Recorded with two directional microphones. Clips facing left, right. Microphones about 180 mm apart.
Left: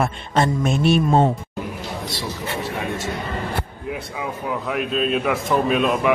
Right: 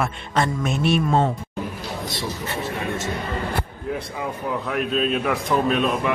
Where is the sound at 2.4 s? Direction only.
15° left (ahead or behind).